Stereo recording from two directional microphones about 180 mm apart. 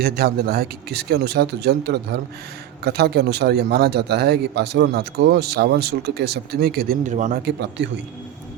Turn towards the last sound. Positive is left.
turn(degrees=-70)  # may be behind; listen again after turning